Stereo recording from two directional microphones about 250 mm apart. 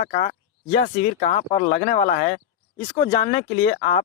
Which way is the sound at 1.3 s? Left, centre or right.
Left.